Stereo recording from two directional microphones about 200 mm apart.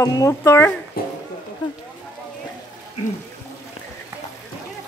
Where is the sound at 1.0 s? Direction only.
50° left (ahead or behind).